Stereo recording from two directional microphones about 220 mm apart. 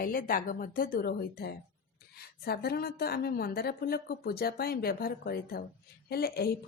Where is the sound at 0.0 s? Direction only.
40° left (ahead or behind).